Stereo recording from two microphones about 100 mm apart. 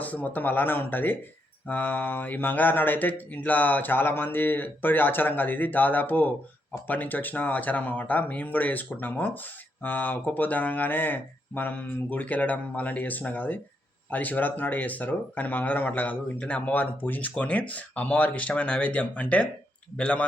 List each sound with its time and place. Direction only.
0.0 s speech: 15° left (ahead or behind)